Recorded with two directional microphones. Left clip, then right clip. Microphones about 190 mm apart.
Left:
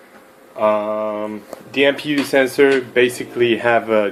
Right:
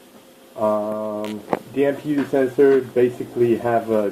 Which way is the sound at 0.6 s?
30° left (ahead or behind).